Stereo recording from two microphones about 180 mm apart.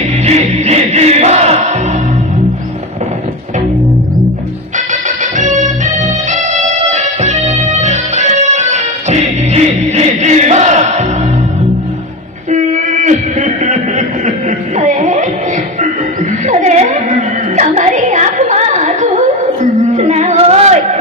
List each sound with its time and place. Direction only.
0.3 s music: 40° right (ahead or behind)
4.9 s music: 45° right (ahead or behind)
12.5 s a sound: 40° right (ahead or behind)
14.8 s music: 45° right (ahead or behind)
16.5 s music: 45° right (ahead or behind)
20.0 s singing: 40° right (ahead or behind)